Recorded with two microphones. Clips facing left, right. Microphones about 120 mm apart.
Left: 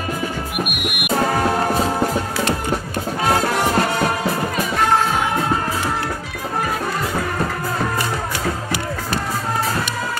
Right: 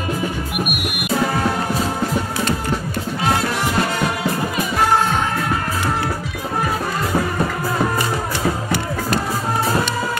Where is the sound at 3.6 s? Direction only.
40° left (ahead or behind).